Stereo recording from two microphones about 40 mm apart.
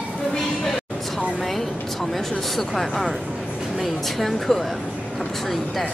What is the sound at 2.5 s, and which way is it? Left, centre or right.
Speech, centre.